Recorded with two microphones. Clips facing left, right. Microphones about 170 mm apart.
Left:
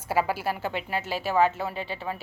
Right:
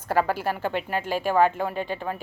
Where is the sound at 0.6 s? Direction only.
45° right (ahead or behind).